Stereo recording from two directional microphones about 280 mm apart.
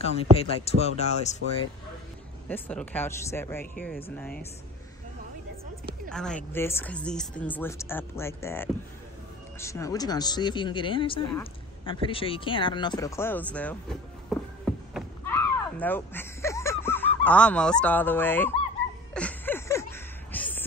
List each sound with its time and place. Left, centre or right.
0.0 s speech: left
2.4 s speech: centre
6.0 s speech: centre
15.3 s a sound: centre